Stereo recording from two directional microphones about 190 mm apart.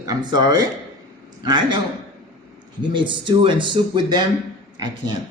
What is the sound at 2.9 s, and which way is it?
A man's voice, 25° right (ahead or behind).